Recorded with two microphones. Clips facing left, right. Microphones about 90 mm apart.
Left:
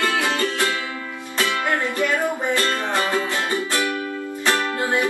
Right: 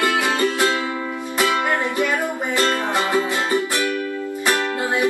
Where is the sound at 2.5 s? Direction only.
20° right (ahead or behind).